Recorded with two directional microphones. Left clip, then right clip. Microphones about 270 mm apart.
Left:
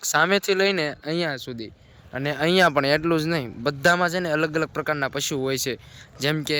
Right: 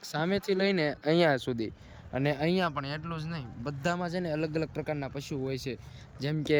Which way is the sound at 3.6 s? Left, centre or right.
Left.